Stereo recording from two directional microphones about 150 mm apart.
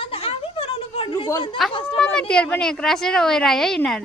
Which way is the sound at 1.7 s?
35° left (ahead or behind).